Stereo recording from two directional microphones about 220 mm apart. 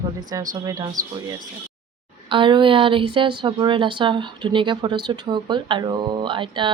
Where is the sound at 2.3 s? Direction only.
20° right (ahead or behind).